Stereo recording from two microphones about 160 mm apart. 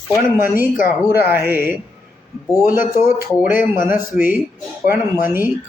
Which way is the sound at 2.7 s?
60° left (ahead or behind).